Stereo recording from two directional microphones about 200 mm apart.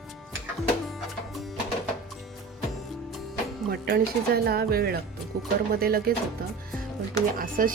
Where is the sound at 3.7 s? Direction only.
50° right (ahead or behind).